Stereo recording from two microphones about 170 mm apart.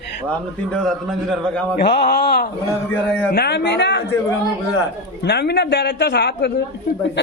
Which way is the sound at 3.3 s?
75° left (ahead or behind).